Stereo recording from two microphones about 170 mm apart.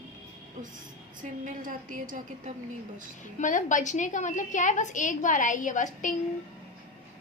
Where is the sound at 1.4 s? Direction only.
50° right (ahead or behind).